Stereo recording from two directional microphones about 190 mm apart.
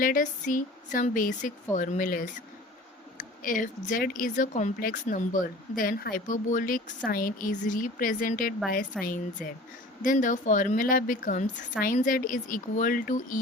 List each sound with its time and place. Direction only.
0.0 s speech: 45° left (ahead or behind)
8.9 s speech: centre (ahead or behind)
10.0 s speech: 45° left (ahead or behind)